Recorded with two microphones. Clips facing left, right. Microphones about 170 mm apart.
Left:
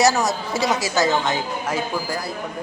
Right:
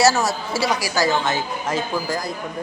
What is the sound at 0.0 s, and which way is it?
A woman's voice, 20° left (ahead or behind).